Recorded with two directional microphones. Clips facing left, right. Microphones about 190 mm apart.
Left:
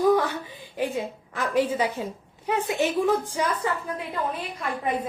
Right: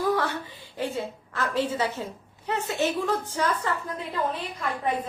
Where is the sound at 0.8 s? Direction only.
15° left (ahead or behind).